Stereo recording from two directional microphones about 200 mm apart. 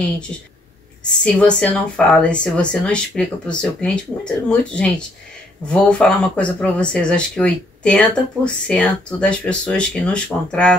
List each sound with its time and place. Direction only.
1.2 s speech: 5° left (ahead or behind)